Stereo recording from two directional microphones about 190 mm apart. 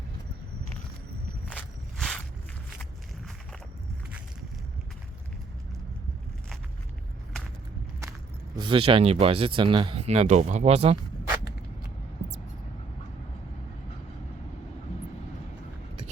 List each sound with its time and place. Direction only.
1.5 s walk: 5° left (ahead or behind)
8.5 s speech: 25° right (ahead or behind)